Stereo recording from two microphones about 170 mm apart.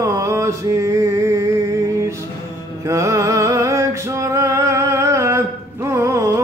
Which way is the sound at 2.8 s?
20° right (ahead or behind).